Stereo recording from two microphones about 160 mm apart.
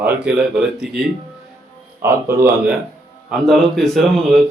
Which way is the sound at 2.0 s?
15° right (ahead or behind).